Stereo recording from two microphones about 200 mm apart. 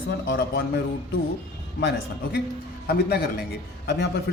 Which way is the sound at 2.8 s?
50° left (ahead or behind).